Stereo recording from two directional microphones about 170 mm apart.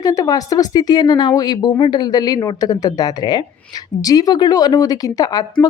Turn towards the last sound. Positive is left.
turn(degrees=20)  # may be behind; listen again after turning